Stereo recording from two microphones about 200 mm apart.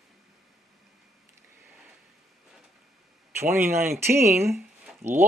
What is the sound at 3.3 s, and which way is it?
Speech, 10° right (ahead or behind).